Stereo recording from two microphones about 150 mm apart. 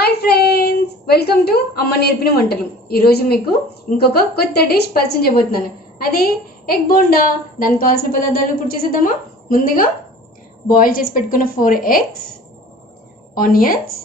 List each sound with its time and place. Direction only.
0.0 s a woman's voice: 90° left; by 12.0 s 70° left (ahead or behind)
13.3 s a woman's voice: 70° left (ahead or behind)